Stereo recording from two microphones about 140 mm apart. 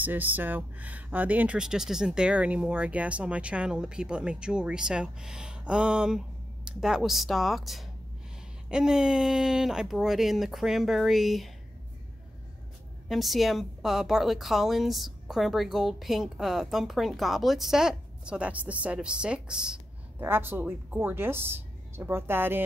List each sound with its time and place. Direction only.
0.0 s a woman's voice: 15° right (ahead or behind)
13.1 s a woman's voice: centre (ahead or behind); by 22.6 s 15° right (ahead or behind)